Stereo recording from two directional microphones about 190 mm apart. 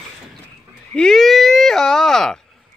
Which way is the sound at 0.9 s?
Centre (ahead or behind).